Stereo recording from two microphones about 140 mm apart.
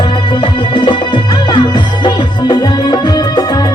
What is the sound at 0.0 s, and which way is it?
Music, 35° left (ahead or behind).